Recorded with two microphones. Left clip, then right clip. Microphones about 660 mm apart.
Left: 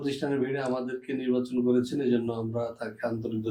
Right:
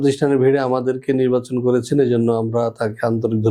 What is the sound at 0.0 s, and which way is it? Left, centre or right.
Speech, right.